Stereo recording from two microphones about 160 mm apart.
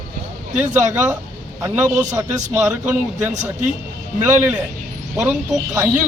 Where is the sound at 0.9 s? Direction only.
15° right (ahead or behind).